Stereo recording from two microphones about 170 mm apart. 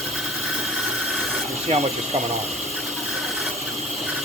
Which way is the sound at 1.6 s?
40° right (ahead or behind).